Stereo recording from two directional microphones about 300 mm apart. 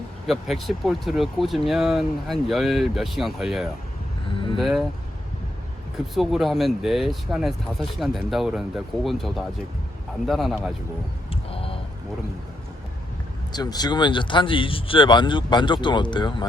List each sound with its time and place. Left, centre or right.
0.3 s speech: centre
6.1 s speech: centre
11.5 s a sound: centre
13.5 s speech: centre